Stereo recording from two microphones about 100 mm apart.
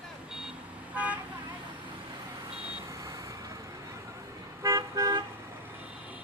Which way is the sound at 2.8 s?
35° right (ahead or behind).